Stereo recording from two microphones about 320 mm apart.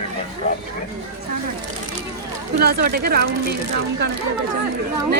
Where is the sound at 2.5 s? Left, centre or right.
Right.